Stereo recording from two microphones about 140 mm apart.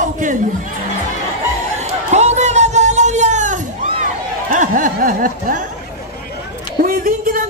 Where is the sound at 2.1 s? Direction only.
55° right (ahead or behind); by 5.6 s 75° right (ahead or behind).